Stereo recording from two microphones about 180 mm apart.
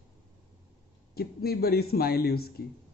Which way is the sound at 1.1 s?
60° left (ahead or behind).